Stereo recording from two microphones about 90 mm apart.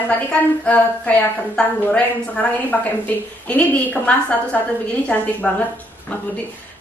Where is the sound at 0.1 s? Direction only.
15° left (ahead or behind).